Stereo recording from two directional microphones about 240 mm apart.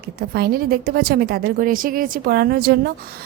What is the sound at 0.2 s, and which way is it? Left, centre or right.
A woman's voice, right.